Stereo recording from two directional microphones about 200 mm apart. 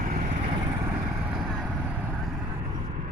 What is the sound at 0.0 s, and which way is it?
Vehicle, 45° right (ahead or behind).